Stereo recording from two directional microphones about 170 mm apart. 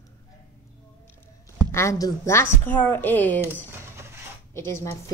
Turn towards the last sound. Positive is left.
turn(degrees=15)  # may be behind; listen again after turning